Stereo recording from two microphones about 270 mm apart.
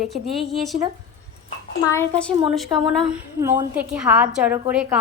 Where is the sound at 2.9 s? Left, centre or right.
Centre.